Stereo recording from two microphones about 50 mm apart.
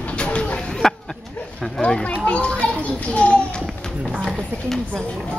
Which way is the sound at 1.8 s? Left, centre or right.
Left.